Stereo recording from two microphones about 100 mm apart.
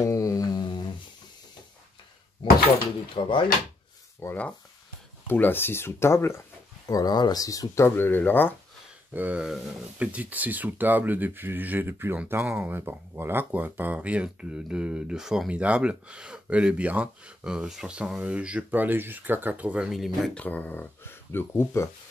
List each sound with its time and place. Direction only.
0.0 s humming: 35° left (ahead or behind)
3.2 s speech: 60° left (ahead or behind)
4.2 s speech: 25° left (ahead or behind)
6.9 s speech: 40° left (ahead or behind); by 8.5 s 20° left (ahead or behind)
9.1 s speech: 15° right (ahead or behind)
19.9 s speech: centre (ahead or behind)
20.3 s speech: 15° left (ahead or behind)